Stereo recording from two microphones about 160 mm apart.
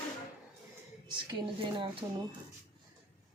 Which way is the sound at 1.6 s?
35° right (ahead or behind).